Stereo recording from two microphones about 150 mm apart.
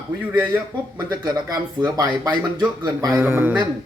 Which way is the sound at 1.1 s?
25° right (ahead or behind).